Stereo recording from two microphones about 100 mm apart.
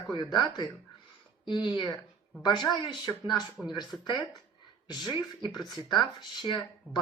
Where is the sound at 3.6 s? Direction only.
5° right (ahead or behind).